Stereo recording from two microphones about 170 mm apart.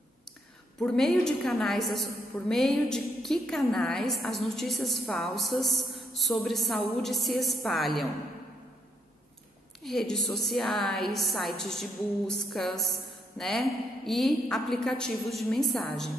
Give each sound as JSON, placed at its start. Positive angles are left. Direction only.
{"t": 0.7, "sound": "a woman's voice", "side_deg": 0}
{"t": 9.8, "sound": "a woman's voice", "side_deg": 0}